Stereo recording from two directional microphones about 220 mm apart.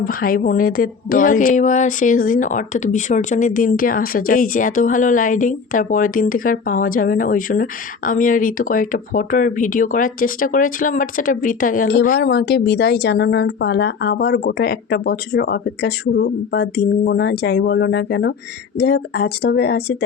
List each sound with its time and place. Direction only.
0.0 s a woman's voice: 40° left (ahead or behind)